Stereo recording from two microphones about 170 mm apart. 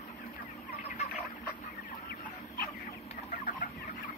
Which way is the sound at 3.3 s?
50° left (ahead or behind).